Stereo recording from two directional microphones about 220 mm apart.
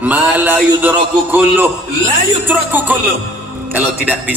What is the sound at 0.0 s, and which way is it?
A man's voice, 5° right (ahead or behind).